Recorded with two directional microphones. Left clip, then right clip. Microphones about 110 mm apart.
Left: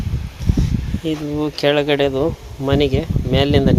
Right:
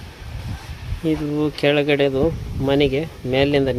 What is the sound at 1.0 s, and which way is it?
Speech, 35° right (ahead or behind).